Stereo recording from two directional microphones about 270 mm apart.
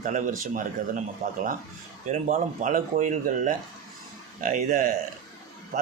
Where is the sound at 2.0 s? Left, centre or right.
Right.